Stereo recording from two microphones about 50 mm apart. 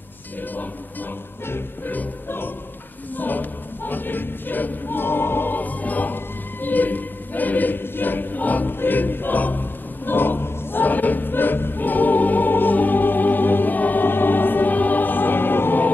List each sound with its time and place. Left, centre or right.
1.9 s music: left
3.2 s choir: left